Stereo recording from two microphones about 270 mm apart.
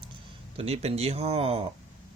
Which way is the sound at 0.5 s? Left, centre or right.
Right.